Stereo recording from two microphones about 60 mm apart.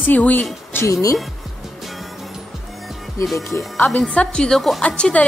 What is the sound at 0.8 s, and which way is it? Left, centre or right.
Speech, left.